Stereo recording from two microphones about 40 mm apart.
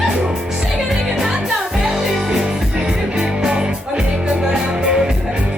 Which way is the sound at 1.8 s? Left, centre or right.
Centre.